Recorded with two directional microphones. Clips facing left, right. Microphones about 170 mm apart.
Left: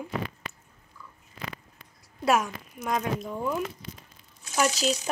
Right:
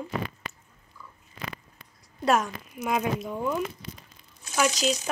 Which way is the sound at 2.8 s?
5° right (ahead or behind).